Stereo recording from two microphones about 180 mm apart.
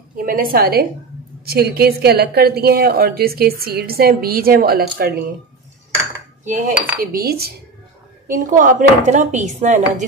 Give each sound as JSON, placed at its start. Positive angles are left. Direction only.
{"t": 0.1, "sound": "a woman's voice", "side_deg": -50}
{"t": 6.4, "sound": "cutlery", "side_deg": -45}
{"t": 7.0, "sound": "a woman's voice", "side_deg": -55}
{"t": 8.3, "sound": "speech", "side_deg": -45}